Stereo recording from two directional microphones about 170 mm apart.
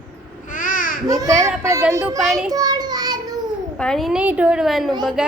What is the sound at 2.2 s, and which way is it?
Speech, centre (ahead or behind).